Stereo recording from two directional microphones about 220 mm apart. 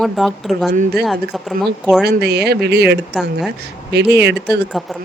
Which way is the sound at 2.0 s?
50° right (ahead or behind).